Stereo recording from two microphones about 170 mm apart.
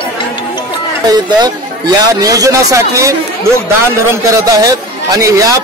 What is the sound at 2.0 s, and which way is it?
A man's voice, 20° right (ahead or behind).